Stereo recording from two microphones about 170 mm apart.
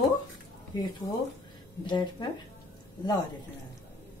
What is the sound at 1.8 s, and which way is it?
Speech, 25° left (ahead or behind).